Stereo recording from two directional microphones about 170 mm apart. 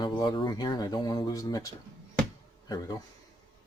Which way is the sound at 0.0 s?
25° left (ahead or behind).